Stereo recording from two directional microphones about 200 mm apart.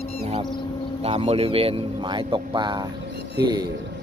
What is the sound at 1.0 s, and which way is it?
A man's voice, 30° right (ahead or behind).